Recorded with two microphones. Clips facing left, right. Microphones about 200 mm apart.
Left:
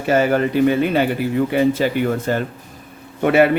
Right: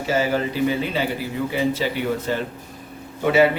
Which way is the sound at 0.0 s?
60° left (ahead or behind).